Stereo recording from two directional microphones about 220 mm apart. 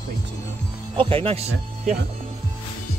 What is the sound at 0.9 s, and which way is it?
Speech, 25° right (ahead or behind).